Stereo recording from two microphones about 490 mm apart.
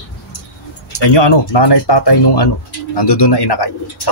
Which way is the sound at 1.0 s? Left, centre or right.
Left.